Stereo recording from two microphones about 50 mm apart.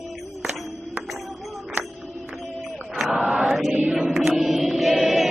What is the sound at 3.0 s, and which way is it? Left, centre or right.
Chant, centre.